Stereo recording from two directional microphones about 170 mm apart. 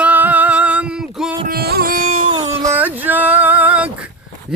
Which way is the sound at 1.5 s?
65° right (ahead or behind).